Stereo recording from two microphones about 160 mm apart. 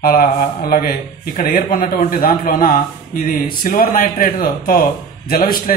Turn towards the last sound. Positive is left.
turn(degrees=65)  # may be behind; listen again after turning